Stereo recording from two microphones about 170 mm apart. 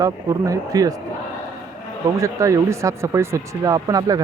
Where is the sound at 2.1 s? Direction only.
20° right (ahead or behind).